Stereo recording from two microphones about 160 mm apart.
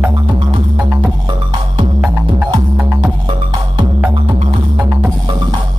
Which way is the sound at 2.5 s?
25° right (ahead or behind).